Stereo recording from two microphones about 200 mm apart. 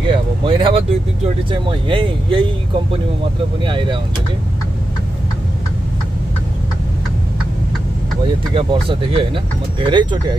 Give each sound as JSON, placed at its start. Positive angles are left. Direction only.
{"t": 0.0, "sound": "speech", "side_deg": -25}
{"t": 3.6, "sound": "speech", "side_deg": -25}
{"t": 8.5, "sound": "speech", "side_deg": -25}